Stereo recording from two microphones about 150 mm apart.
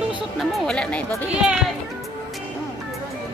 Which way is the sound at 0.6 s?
5° left (ahead or behind).